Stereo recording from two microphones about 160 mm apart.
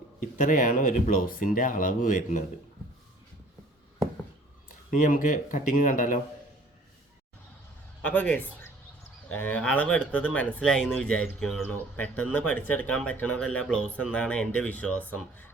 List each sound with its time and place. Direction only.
0.2 s speech: 55° left (ahead or behind)
4.9 s speech: 55° left (ahead or behind)
8.0 s speech: 10° left (ahead or behind)